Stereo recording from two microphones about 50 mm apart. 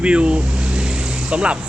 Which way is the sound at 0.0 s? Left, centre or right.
Right.